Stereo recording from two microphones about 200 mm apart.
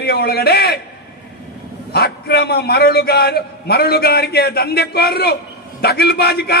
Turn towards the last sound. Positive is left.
turn(degrees=55)  # may be behind; listen again after turning